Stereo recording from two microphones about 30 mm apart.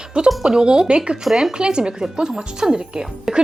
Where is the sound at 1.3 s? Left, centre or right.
Centre.